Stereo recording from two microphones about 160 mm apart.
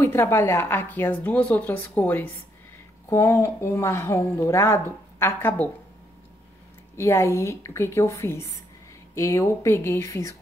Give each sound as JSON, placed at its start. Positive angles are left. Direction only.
{"t": 0.0, "sound": "speech", "side_deg": 15}
{"t": 7.0, "sound": "speech", "side_deg": 20}